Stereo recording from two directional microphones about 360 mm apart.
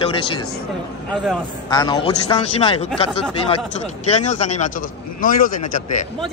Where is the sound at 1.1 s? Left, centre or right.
Centre.